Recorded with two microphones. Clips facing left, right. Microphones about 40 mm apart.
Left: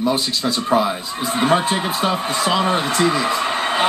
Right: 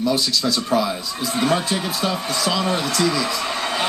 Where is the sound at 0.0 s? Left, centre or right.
Left.